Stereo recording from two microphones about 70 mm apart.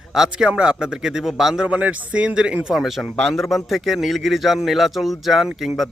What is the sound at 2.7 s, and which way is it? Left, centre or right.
Speech, centre.